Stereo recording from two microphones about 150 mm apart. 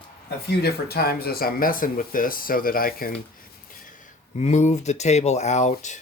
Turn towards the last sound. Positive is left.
turn(degrees=50)  # may be behind; listen again after turning